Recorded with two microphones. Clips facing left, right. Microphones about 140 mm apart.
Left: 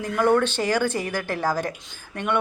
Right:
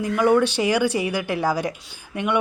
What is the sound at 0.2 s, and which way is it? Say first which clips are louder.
Speech: right 2 dB; 10° right (ahead or behind).